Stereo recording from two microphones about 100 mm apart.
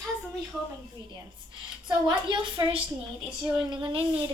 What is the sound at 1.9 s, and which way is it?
A woman's voice, 50° right (ahead or behind).